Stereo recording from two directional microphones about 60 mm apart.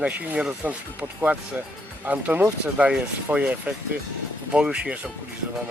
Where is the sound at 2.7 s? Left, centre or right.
Centre.